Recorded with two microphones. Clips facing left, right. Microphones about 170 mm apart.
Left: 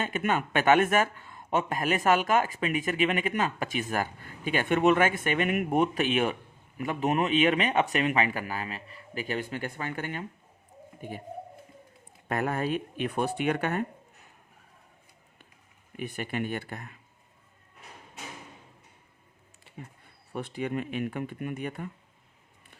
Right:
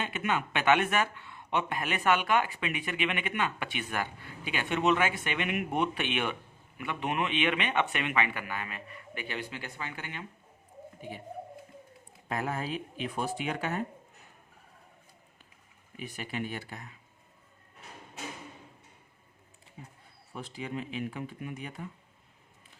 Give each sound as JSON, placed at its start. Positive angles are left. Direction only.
{"t": 0.0, "sound": "speech", "side_deg": 45}
{"t": 12.3, "sound": "speech", "side_deg": 60}
{"t": 16.0, "sound": "speech", "side_deg": 55}
{"t": 20.3, "sound": "speech", "side_deg": 60}